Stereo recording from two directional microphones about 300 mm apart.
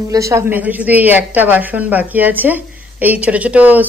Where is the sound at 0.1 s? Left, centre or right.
Centre.